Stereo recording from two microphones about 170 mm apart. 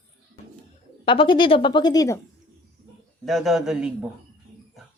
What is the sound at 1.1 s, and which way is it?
A woman's voice, 30° left (ahead or behind).